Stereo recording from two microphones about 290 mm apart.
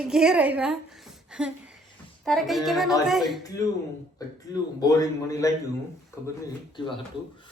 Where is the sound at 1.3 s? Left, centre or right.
Centre.